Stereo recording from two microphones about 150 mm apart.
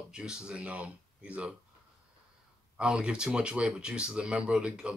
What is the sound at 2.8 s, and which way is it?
Speech, 5° right (ahead or behind).